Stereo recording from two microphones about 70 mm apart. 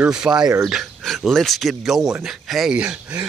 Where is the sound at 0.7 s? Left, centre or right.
Centre.